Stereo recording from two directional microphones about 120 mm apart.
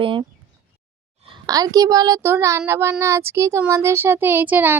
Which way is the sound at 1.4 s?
30° right (ahead or behind).